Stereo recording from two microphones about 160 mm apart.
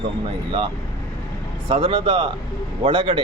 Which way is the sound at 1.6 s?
35° right (ahead or behind).